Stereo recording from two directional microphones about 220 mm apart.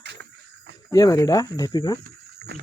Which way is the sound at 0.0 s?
50° right (ahead or behind).